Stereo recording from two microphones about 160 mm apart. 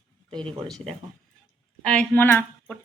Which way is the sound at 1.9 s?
10° left (ahead or behind).